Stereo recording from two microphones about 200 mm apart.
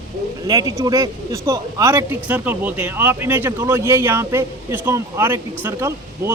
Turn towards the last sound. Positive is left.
turn(degrees=-15)  # may be behind; listen again after turning